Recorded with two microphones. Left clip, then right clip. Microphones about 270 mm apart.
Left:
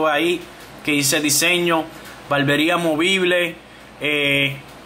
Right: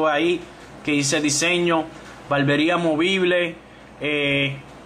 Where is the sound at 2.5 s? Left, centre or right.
Centre.